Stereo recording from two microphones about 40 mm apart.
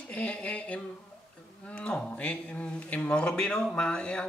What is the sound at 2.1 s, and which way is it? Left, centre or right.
Speech, left.